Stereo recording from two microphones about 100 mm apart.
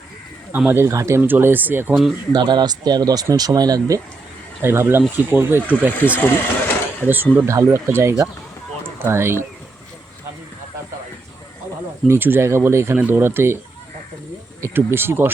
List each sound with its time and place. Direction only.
0.7 s speech: 30° right (ahead or behind)
2.3 s speech: 50° right (ahead or behind)
4.6 s speech: 25° right (ahead or behind)
6.0 s speech: 20° left (ahead or behind)
7.1 s speech: 20° right (ahead or behind)
7.4 s speech: 30° right (ahead or behind)
12.0 s speech: 25° right (ahead or behind)
14.6 s speech: 25° right (ahead or behind)